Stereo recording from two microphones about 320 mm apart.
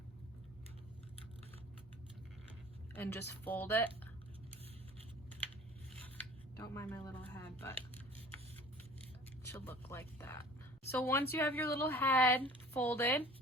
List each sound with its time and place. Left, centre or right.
2.9 s a woman's voice: centre
6.1 s scissors: centre
7.6 s speech: centre
9.5 s a woman's voice: centre